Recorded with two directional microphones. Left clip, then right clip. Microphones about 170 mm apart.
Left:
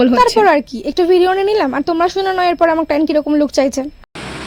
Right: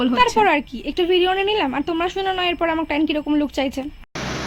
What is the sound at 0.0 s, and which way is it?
A woman's voice, 35° left (ahead or behind).